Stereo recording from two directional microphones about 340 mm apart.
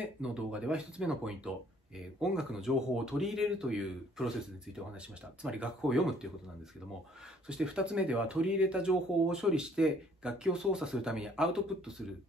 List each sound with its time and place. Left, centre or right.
0.0 s speech: centre
5.4 s speech: centre
7.4 s speech: centre